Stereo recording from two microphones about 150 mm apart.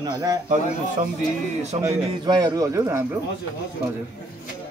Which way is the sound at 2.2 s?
25° right (ahead or behind).